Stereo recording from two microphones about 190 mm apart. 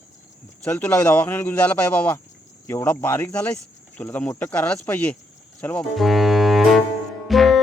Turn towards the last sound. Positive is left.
turn(degrees=0)  # may be behind; listen again after turning